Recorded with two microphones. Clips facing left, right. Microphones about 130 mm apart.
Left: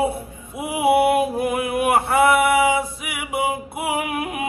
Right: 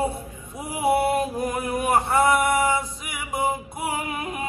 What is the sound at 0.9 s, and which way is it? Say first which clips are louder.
Music: left 5 dB; 60° left (ahead or behind).